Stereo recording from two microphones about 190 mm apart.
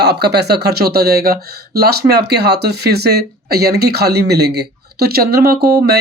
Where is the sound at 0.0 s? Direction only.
60° right (ahead or behind).